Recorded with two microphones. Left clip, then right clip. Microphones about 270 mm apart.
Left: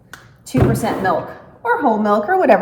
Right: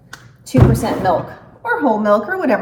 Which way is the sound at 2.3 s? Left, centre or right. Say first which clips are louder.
Left 6 dB; centre.